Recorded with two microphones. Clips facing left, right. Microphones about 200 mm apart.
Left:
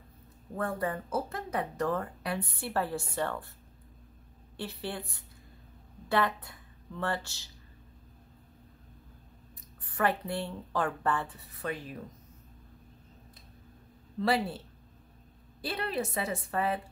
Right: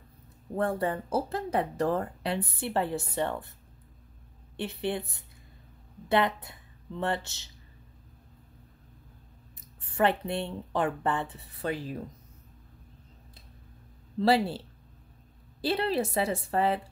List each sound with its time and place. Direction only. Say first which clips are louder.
0.6 s speech: right 4 dB; 30° right (ahead or behind)
4.6 s speech: right 6 dB; 20° right (ahead or behind)
9.8 s speech: right 4 dB; 25° right (ahead or behind)
14.2 s a woman's voice: right 5 dB; 30° right (ahead or behind)
15.6 s a woman's voice: right 6 dB; 30° right (ahead or behind)